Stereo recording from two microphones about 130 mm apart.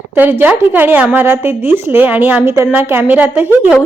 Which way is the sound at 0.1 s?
15° right (ahead or behind).